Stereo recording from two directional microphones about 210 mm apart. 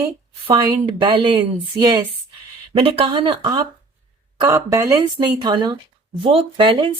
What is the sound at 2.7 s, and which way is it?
A woman's voice, 25° right (ahead or behind).